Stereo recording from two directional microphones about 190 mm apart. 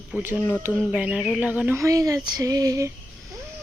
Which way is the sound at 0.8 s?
5° right (ahead or behind).